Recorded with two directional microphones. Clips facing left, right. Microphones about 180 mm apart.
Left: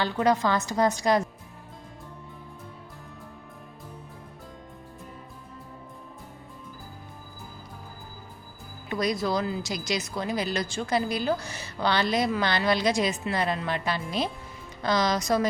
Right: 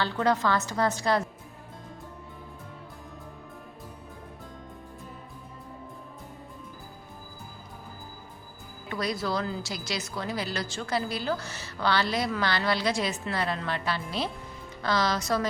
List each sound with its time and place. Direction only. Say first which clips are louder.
0.0 s a woman's voice: left 2 dB; 15° left (ahead or behind)
8.9 s a woman's voice: left 3 dB; 15° left (ahead or behind)